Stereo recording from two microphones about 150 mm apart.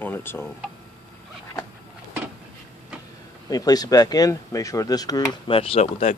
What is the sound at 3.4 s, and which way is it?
Speech, 25° left (ahead or behind).